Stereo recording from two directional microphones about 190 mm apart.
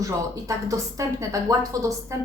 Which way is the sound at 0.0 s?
15° right (ahead or behind).